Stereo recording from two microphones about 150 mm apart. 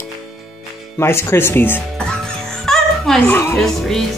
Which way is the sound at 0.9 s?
15° left (ahead or behind).